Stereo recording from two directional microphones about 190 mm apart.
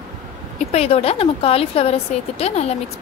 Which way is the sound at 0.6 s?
35° left (ahead or behind).